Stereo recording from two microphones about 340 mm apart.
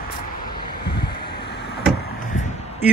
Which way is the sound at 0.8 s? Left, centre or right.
Left.